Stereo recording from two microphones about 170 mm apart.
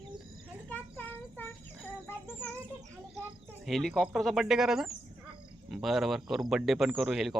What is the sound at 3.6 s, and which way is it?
Speech, centre (ahead or behind).